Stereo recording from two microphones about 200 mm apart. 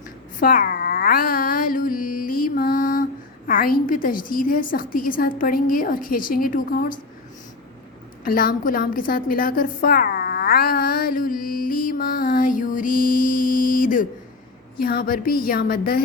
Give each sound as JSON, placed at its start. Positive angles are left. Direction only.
{"t": 0.3, "sound": "mantra", "side_deg": 45}
{"t": 8.2, "sound": "a sound", "side_deg": 45}
{"t": 14.8, "sound": "mantra", "side_deg": 45}